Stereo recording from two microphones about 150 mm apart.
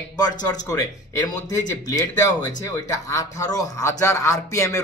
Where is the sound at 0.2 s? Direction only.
25° left (ahead or behind).